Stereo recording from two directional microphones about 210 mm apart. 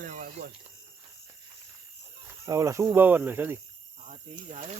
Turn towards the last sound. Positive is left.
turn(degrees=-10)  # may be behind; listen again after turning